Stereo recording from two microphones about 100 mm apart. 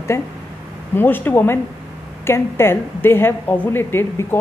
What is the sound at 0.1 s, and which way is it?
A woman's voice, 25° left (ahead or behind).